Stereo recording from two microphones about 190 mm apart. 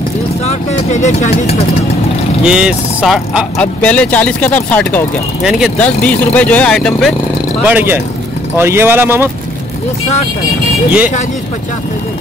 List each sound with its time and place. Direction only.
0.5 s speech: 40° left (ahead or behind)
2.4 s speech: 5° right (ahead or behind)
7.6 s speech: 10° right (ahead or behind)